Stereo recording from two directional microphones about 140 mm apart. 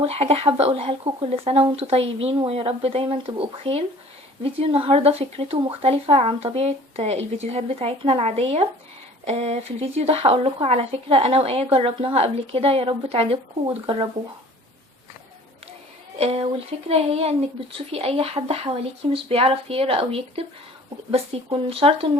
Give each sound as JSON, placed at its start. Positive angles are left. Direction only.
{"t": 0.0, "sound": "speech", "side_deg": -45}
{"t": 16.1, "sound": "speech", "side_deg": -45}